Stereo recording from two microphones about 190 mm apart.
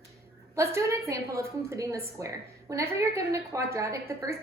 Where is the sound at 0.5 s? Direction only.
15° right (ahead or behind).